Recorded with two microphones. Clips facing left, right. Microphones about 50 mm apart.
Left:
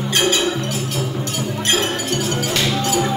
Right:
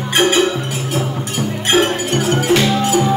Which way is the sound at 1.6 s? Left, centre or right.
Right.